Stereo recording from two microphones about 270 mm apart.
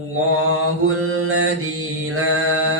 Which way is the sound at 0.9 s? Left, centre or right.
Right.